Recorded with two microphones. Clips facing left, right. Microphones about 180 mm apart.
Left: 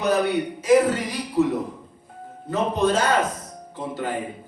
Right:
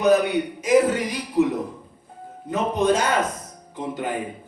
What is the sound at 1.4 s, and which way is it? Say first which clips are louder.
A man's voice: right 1 dB; 15° right (ahead or behind).